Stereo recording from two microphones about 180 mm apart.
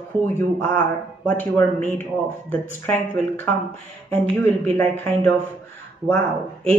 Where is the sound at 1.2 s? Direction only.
10° left (ahead or behind).